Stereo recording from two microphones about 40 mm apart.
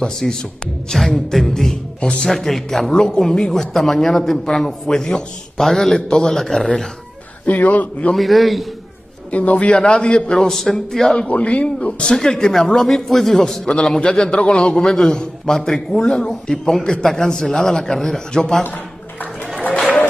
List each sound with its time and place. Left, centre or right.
0.0 s a man's voice: centre
2.0 s a man's voice: left
2.2 s a man's voice: centre
7.4 s a man's voice: left
8.1 s a man's voice: centre
9.3 s a man's voice: left
10.5 s a man's voice: centre
11.2 s a man's voice: left; by 13.6 s centre
13.7 s a man's voice: left